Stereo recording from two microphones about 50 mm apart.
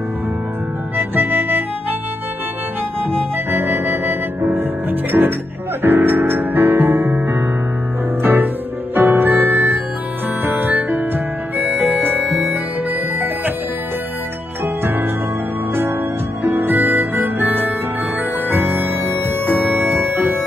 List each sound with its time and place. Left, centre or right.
1.1 s harmonica: right
3.5 s music: right
11.6 s harmonica: right
14.6 s music: right
16.4 s music: right